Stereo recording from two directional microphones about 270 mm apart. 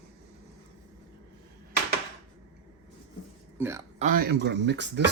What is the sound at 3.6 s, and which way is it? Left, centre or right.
Speech, centre.